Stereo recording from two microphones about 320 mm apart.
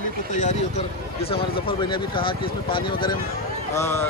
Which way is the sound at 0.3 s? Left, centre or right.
Left.